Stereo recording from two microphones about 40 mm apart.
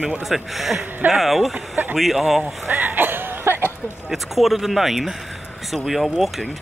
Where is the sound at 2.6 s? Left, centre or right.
Right.